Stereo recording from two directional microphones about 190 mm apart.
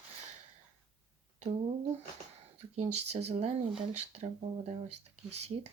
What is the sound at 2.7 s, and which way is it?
Speech, 35° right (ahead or behind).